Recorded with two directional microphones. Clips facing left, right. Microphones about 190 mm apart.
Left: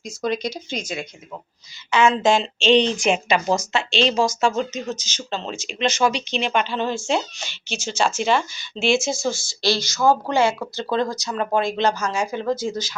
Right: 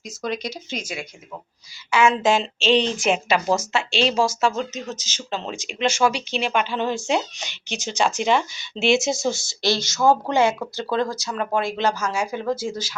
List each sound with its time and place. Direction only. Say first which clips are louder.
0.2 s a woman's voice: left 3 dB; centre (ahead or behind); by 10.5 s 20° right (ahead or behind)
11.1 s a woman's voice: left 2 dB; 5° right (ahead or behind)